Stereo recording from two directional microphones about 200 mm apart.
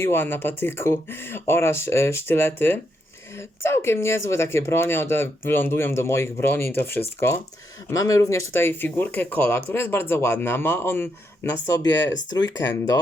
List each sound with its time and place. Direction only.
0.0 s speech: 10° left (ahead or behind)
11.8 s speech: 65° left (ahead or behind)